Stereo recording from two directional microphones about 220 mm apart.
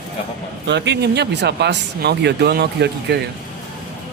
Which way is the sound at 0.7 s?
50° right (ahead or behind).